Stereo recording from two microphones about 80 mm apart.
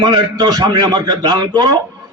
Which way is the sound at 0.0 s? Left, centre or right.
Right.